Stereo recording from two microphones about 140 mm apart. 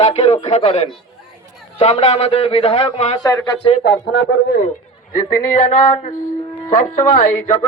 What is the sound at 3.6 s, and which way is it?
Speech, 35° left (ahead or behind).